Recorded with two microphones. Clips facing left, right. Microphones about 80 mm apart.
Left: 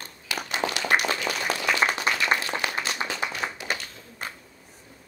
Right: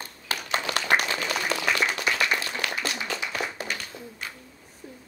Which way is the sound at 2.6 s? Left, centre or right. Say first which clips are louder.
Left 1 dB; left.